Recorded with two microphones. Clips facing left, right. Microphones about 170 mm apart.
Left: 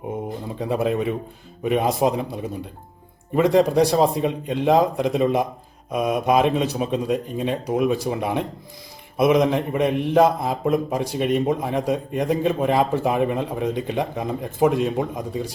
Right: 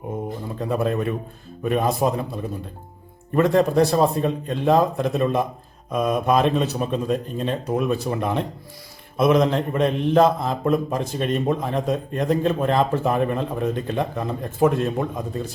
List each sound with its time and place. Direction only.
0.6 s a man's voice: 15° left (ahead or behind)